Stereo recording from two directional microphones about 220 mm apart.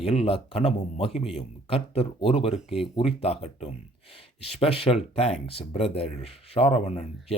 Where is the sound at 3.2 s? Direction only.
25° left (ahead or behind).